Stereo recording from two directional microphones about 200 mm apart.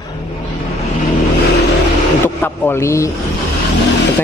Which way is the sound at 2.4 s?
10° left (ahead or behind).